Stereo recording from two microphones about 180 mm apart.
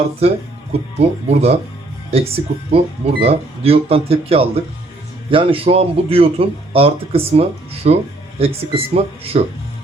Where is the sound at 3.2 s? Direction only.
30° right (ahead or behind).